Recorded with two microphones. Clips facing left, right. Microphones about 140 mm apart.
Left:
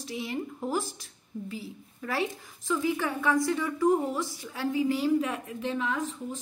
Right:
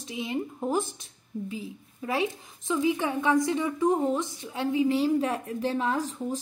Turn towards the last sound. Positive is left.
turn(degrees=-35)  # may be behind; listen again after turning